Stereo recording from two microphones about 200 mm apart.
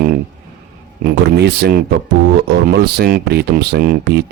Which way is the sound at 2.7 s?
55° right (ahead or behind).